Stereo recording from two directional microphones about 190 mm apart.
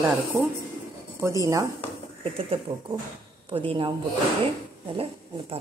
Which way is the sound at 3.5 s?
25° right (ahead or behind).